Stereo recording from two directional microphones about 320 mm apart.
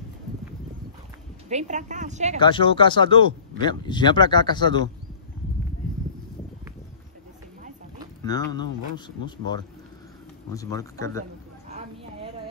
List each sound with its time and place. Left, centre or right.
1.5 s a woman's voice: right
2.4 s speech: centre
8.2 s speech: centre
10.5 s speech: centre